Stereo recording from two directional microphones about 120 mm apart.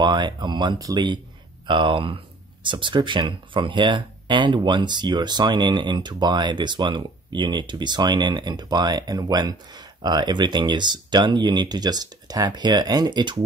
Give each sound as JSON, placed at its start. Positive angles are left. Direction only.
{"t": 0.0, "sound": "speech", "side_deg": -40}